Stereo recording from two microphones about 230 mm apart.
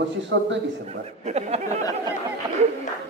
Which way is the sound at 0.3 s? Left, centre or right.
Right.